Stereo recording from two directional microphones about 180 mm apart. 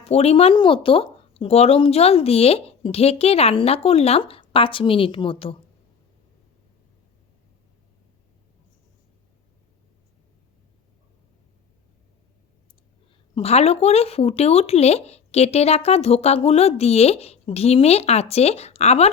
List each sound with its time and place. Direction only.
0.0 s speech: 35° left (ahead or behind)
13.3 s speech: 35° left (ahead or behind)